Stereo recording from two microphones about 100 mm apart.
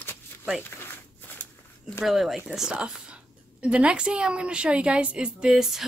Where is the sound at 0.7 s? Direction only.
20° left (ahead or behind).